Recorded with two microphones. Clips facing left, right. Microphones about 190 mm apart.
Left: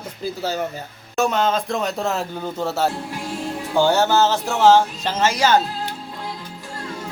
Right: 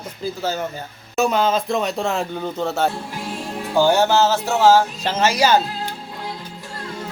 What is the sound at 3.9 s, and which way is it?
A man's voice, 15° right (ahead or behind).